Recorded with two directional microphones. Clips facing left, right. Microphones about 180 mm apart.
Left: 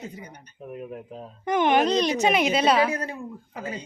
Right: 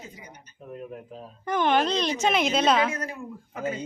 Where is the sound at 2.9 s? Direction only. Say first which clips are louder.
Left 3 dB; 30° left (ahead or behind).